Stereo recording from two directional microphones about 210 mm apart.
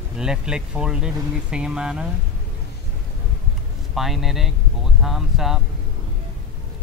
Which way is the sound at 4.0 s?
Centre (ahead or behind).